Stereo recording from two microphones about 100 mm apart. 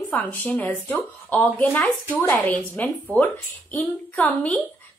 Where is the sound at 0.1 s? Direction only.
15° left (ahead or behind).